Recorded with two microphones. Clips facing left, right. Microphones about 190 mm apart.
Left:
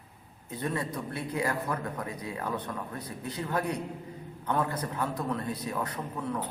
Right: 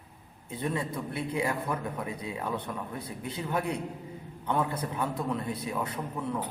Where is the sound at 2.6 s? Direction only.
10° right (ahead or behind).